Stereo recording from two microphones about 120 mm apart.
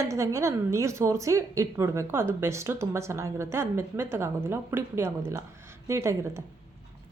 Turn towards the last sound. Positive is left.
turn(degrees=-25)  # may be behind; listen again after turning